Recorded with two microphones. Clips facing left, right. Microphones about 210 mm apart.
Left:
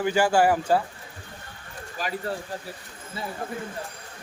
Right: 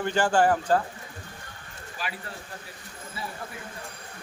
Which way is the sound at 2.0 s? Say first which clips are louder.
Left 7 dB; 40° left (ahead or behind).